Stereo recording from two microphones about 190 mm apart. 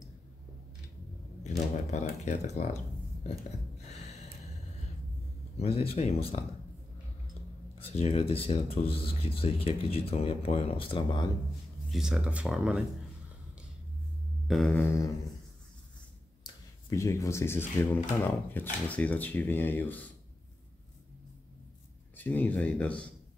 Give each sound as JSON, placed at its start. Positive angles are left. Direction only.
{"t": 1.9, "sound": "speech", "side_deg": 35}
{"t": 5.6, "sound": "speech", "side_deg": 30}
{"t": 7.8, "sound": "speech", "side_deg": 30}
{"t": 11.9, "sound": "speech", "side_deg": -5}
{"t": 14.5, "sound": "speech", "side_deg": 5}
{"t": 16.4, "sound": "speech", "side_deg": 15}
{"t": 22.1, "sound": "speech", "side_deg": 10}